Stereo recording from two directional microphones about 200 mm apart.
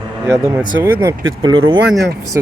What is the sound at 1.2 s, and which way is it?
Speech, 80° right.